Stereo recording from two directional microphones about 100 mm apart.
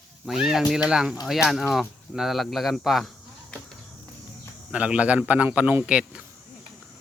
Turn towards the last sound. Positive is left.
turn(degrees=-10)  # may be behind; listen again after turning